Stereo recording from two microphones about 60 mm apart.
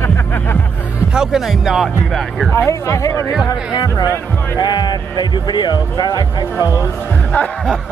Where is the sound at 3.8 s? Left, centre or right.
Left.